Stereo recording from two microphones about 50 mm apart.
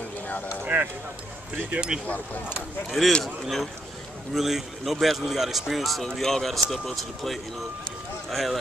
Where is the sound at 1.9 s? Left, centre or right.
Centre.